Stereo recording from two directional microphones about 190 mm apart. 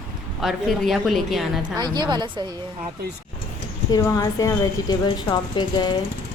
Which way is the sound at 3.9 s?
20° left (ahead or behind).